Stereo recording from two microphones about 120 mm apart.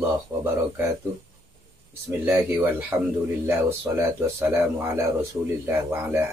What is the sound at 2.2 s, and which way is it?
Speech, 20° right (ahead or behind).